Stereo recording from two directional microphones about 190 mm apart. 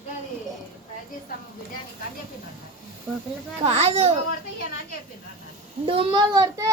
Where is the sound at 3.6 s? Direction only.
35° right (ahead or behind).